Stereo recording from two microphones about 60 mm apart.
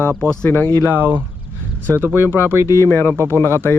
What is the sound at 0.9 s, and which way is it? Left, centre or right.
Speech, right.